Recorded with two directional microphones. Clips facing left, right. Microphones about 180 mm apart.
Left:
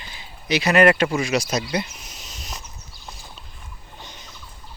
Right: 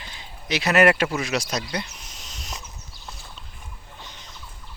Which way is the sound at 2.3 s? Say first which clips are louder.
Even; centre (ahead or behind).